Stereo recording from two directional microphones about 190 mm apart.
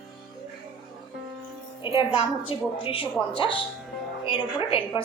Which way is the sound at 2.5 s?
30° left (ahead or behind).